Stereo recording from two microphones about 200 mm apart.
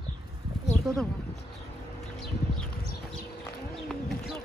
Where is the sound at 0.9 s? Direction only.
Centre (ahead or behind).